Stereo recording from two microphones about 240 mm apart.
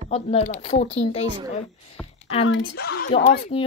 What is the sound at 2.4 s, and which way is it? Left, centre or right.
Speech, left.